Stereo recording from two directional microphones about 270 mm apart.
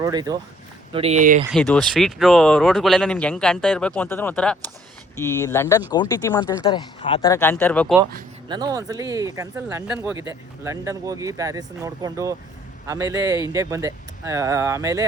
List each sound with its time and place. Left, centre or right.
0.0 s speech: centre
1.5 s speech: centre
8.4 s speech: centre